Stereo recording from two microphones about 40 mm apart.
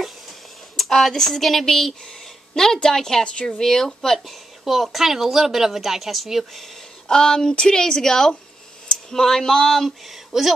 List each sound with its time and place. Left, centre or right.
0.0 s a sound: centre
2.0 s speech: centre
7.1 s speech: centre
10.0 s a woman's voice: centre